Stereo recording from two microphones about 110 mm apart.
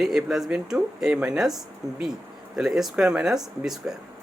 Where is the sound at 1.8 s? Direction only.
35° right (ahead or behind).